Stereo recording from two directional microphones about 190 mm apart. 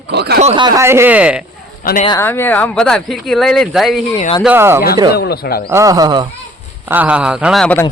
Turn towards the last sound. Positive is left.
turn(degrees=0)  # may be behind; listen again after turning